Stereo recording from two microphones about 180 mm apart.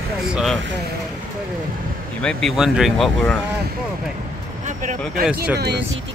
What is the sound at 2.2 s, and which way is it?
Speech, centre (ahead or behind).